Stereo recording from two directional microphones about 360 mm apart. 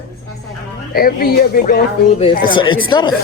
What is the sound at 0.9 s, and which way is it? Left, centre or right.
Speech, left.